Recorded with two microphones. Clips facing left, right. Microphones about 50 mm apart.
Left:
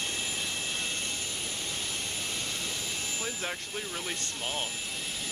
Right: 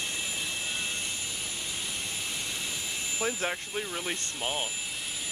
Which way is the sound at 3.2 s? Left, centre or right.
Centre.